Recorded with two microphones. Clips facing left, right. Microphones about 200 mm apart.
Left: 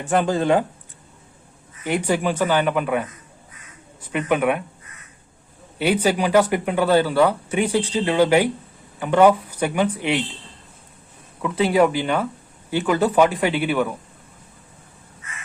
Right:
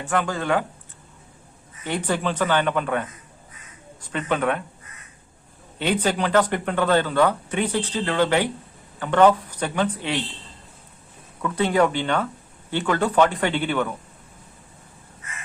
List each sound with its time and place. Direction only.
0.0 s speech: 20° left (ahead or behind)
1.8 s speech: 10° left (ahead or behind)
4.1 s speech: 10° left (ahead or behind)
5.8 s speech: 10° left (ahead or behind)
11.4 s speech: 10° left (ahead or behind)